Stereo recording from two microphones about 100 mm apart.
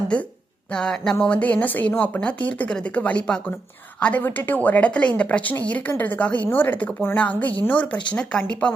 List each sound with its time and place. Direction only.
0.7 s speech: 10° left (ahead or behind)